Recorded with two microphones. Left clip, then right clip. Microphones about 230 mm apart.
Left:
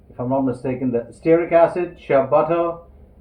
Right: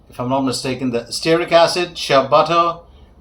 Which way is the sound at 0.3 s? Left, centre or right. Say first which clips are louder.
Right 2 dB; right.